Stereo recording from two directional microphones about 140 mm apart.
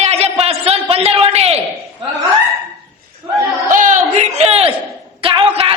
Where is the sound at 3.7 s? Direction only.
65° right (ahead or behind); by 4.7 s 50° right (ahead or behind).